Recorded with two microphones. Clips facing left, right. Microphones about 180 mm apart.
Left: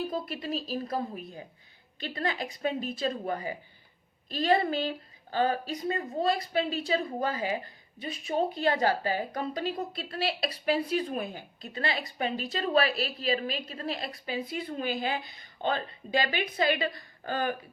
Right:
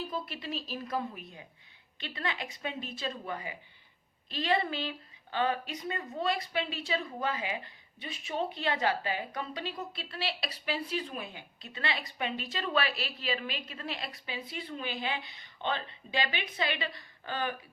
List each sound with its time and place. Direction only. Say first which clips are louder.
0.0 s speech: left 5 dB; 40° left (ahead or behind)